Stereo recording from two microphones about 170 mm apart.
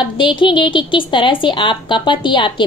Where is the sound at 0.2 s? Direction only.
30° left (ahead or behind).